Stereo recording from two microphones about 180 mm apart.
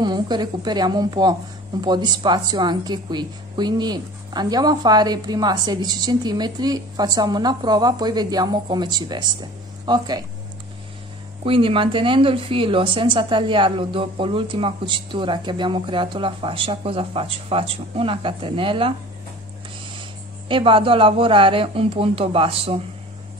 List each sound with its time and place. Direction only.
0.0 s a woman's voice: 25° right (ahead or behind)
11.4 s a woman's voice: 30° right (ahead or behind)
20.4 s a woman's voice: 30° right (ahead or behind)